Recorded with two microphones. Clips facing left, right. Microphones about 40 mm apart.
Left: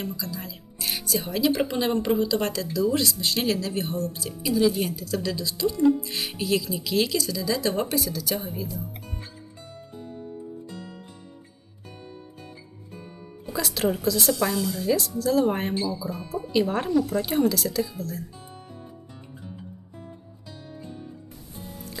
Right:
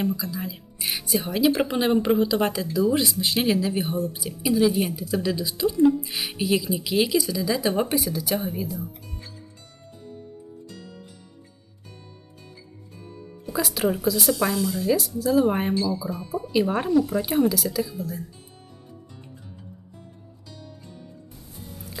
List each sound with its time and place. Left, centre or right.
0.0 s speech: centre
9.9 s music: centre
12.9 s music: left
13.5 s speech: centre
20.0 s music: centre